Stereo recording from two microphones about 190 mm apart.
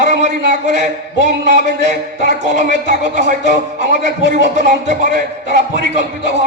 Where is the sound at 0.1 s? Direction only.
40° right (ahead or behind).